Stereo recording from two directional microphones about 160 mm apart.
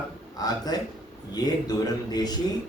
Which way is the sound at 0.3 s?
25° left (ahead or behind).